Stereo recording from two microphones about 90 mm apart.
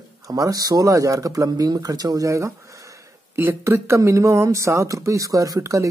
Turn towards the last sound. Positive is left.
turn(degrees=-40)  # may be behind; listen again after turning